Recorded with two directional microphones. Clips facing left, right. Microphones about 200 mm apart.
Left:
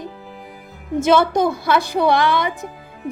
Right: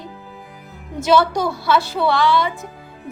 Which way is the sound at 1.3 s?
50° left (ahead or behind).